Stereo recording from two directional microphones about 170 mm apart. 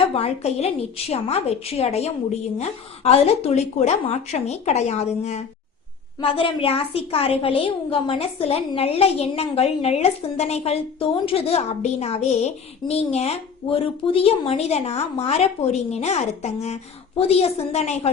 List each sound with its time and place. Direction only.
0.1 s a woman's voice: 35° left (ahead or behind)